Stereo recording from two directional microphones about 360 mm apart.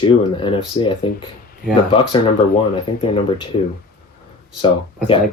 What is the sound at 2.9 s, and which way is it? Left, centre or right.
Speech, centre.